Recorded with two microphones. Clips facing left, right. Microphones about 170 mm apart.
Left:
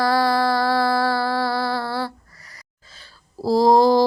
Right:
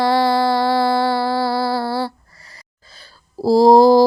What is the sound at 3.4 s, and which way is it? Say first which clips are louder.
Mantra: right 5 dB; 35° right (ahead or behind).